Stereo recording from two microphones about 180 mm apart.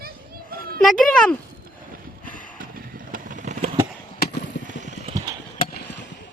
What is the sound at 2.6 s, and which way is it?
Vehicle, 50° right (ahead or behind).